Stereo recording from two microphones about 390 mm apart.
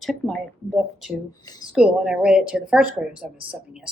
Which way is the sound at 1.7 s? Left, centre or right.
Centre.